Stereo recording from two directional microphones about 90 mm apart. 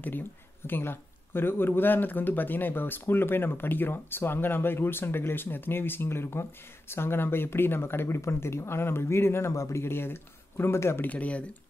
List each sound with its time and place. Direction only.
0.7 s speech: 25° left (ahead or behind)
11.1 s speech: 15° left (ahead or behind)